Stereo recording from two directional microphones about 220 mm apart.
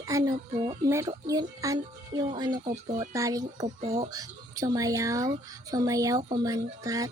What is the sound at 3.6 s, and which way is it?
Speech, 30° right (ahead or behind).